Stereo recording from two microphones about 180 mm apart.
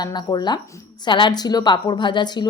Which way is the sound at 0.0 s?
25° left (ahead or behind).